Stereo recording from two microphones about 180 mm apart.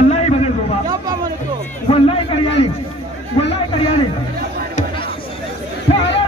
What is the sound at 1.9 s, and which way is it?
Speech, 30° left (ahead or behind).